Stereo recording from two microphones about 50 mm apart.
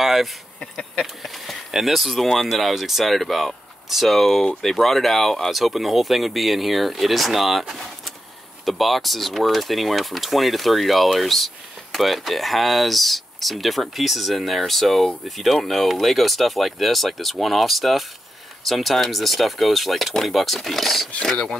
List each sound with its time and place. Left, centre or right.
0.0 s a sound: centre
0.6 s speech: centre
1.2 s speech: centre